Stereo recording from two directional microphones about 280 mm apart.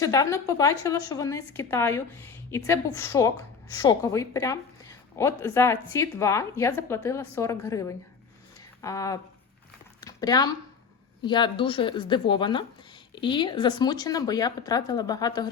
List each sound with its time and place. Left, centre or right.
0.0 s a woman's voice: centre
10.0 s a sound: centre
11.3 s a woman's voice: centre